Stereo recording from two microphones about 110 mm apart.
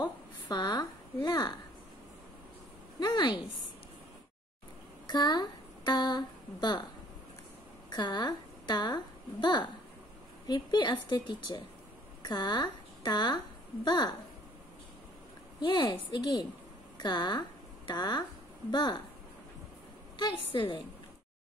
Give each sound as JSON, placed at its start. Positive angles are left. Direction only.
{"t": 0.0, "sound": "a sound", "side_deg": 40}
{"t": 3.0, "sound": "speech", "side_deg": 40}
{"t": 5.0, "sound": "speech", "side_deg": 40}
{"t": 7.9, "sound": "a woman's voice", "side_deg": 40}
{"t": 15.8, "sound": "speech", "side_deg": 35}
{"t": 20.2, "sound": "a woman's voice", "side_deg": 45}